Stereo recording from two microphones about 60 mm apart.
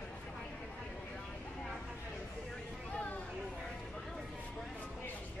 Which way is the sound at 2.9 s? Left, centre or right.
Left.